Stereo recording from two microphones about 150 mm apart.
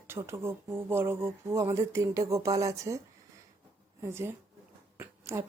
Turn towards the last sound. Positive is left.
turn(degrees=-20)  # may be behind; listen again after turning